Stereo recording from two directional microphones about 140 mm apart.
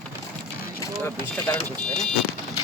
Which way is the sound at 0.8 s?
30° left (ahead or behind).